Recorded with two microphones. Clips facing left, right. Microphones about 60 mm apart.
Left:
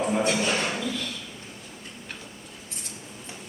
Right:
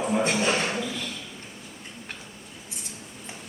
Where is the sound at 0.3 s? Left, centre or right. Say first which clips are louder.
Right 1 dB; right.